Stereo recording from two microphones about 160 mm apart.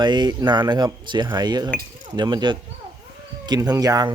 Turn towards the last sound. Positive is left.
turn(degrees=-25)  # may be behind; listen again after turning